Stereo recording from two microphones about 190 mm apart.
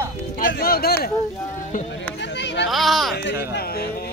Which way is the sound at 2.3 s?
65° left (ahead or behind).